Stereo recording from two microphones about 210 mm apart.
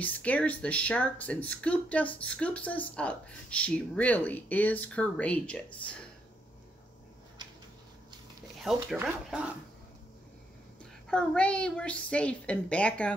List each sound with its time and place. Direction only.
0.0 s speech: 5° left (ahead or behind)
8.7 s a woman's voice: centre (ahead or behind)
11.1 s a woman's voice: 5° left (ahead or behind)